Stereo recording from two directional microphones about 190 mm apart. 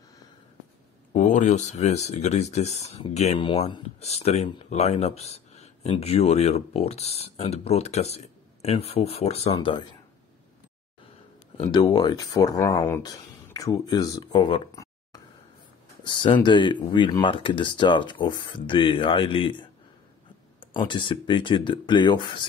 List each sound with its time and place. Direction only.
1.1 s speech: 40° left (ahead or behind); by 9.8 s 25° left (ahead or behind)
11.7 s speech: 20° left (ahead or behind)